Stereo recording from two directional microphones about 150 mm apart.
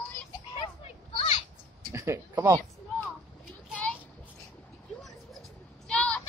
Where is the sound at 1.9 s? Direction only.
20° right (ahead or behind).